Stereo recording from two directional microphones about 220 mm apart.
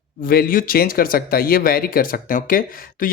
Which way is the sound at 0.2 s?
40° left (ahead or behind).